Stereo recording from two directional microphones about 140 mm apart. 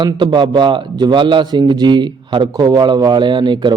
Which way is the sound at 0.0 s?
35° right (ahead or behind).